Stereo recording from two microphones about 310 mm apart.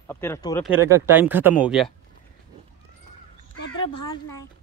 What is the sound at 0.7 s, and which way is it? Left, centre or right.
Speech, centre.